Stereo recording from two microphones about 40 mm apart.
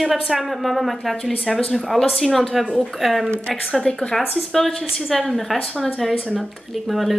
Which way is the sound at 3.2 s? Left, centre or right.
Left.